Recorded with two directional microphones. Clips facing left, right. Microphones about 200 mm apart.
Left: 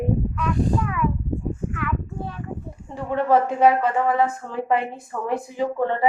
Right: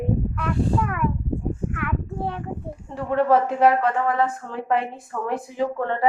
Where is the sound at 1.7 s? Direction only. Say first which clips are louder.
Even; 60° right (ahead or behind).